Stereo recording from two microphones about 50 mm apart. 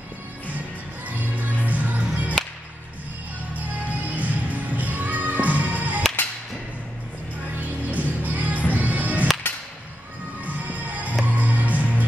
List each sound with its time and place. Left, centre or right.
1.0 s music: right
3.5 s music: right
7.6 s music: right
10.4 s music: right